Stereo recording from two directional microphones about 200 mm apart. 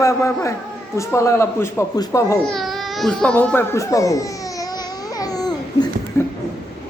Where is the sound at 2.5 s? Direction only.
Centre (ahead or behind); by 5.8 s 20° left (ahead or behind).